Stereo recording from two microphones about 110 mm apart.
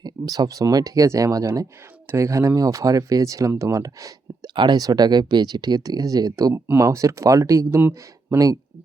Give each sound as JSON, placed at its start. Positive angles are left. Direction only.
{"t": 0.0, "sound": "speech", "side_deg": -35}
{"t": 4.5, "sound": "speech", "side_deg": -40}
{"t": 7.8, "sound": "speech", "side_deg": -15}